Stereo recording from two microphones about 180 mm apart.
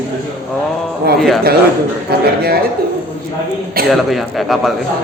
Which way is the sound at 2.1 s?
60° right (ahead or behind).